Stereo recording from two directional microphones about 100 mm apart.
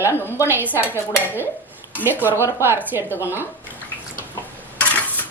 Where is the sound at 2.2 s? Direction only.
20° right (ahead or behind).